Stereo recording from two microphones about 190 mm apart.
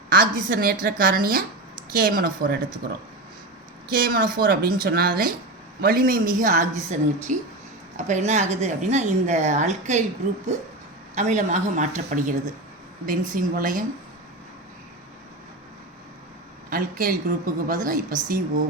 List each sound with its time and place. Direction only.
0.1 s a woman's voice: 50° right (ahead or behind)
3.9 s a woman's voice: 50° right (ahead or behind)
11.1 s a woman's voice: 40° right (ahead or behind)
16.6 s a woman's voice: 45° right (ahead or behind)